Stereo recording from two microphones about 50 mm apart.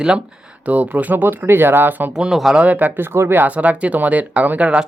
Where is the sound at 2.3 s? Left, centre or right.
Centre.